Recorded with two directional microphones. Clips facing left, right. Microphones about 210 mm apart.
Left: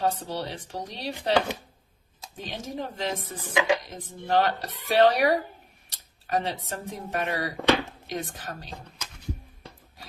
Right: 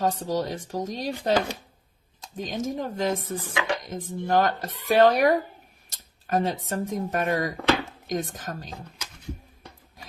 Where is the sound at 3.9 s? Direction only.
45° right (ahead or behind).